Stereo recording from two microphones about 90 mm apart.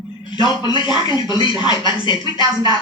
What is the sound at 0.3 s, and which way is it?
A man's voice, 60° left (ahead or behind).